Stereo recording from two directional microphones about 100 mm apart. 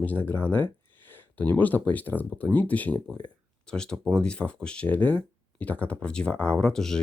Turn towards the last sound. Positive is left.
turn(degrees=5)  # may be behind; listen again after turning